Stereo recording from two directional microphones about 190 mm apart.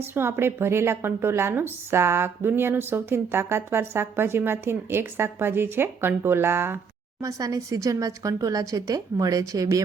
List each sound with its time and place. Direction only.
0.0 s speech: 10° right (ahead or behind)